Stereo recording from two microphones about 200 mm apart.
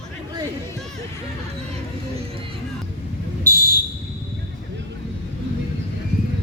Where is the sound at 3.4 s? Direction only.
45° right (ahead or behind).